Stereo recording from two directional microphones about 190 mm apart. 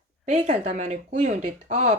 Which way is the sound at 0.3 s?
35° right (ahead or behind).